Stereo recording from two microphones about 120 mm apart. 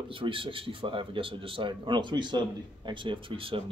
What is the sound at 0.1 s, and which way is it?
A man's voice, 45° right (ahead or behind).